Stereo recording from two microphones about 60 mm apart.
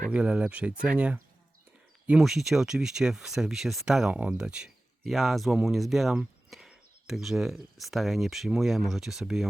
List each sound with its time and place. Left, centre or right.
0.1 s speech: centre
2.2 s speech: centre
4.1 s speech: centre
5.0 s speech: centre